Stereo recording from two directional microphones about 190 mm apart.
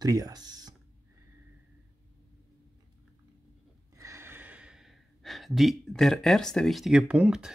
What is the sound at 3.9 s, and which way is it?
Speech, 15° right (ahead or behind).